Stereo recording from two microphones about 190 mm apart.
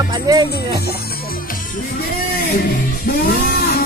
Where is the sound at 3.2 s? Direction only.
55° left (ahead or behind).